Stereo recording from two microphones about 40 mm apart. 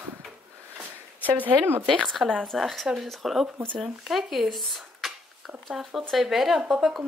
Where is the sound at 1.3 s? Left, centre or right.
Right.